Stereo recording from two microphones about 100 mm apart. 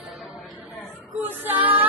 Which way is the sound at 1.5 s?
15° right (ahead or behind).